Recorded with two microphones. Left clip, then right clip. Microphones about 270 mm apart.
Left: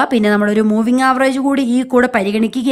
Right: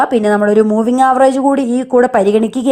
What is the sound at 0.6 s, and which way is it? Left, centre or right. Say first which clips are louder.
Speech: right 3 dB; centre.